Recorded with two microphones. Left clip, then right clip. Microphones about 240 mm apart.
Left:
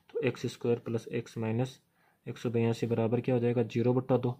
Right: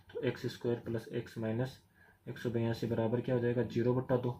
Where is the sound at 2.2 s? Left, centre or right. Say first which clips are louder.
Left 5 dB; left.